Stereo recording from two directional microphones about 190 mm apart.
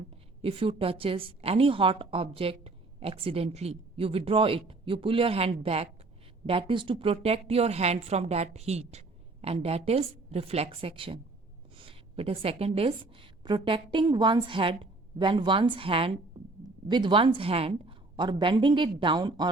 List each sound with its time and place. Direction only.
0.4 s a woman's voice: 30° right (ahead or behind)